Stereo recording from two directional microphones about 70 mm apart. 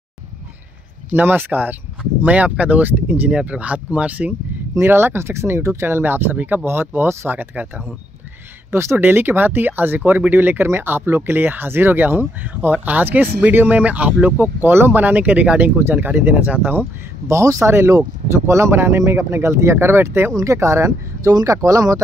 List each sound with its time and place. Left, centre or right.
1.1 s speech: right
4.7 s speech: right
17.3 s speech: right
20.3 s speech: right